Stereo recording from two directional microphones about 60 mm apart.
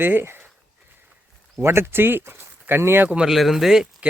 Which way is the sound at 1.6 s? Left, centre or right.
Right.